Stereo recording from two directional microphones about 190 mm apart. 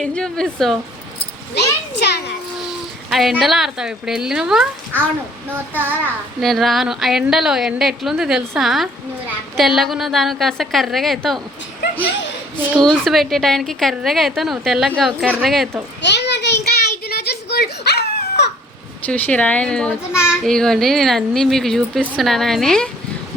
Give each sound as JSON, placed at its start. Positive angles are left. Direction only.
{"t": 0.0, "sound": "a woman's voice", "side_deg": 5}
{"t": 1.5, "sound": "a child's voice", "side_deg": 60}
{"t": 3.1, "sound": "a woman's voice", "side_deg": 0}
{"t": 6.4, "sound": "a woman's voice", "side_deg": 0}
{"t": 12.7, "sound": "a woman's voice", "side_deg": 0}
{"t": 16.0, "sound": "a sound", "side_deg": 65}
{"t": 19.0, "sound": "a child's voice", "side_deg": 10}